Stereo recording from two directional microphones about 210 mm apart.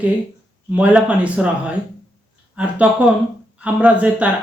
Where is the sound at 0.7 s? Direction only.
5° right (ahead or behind).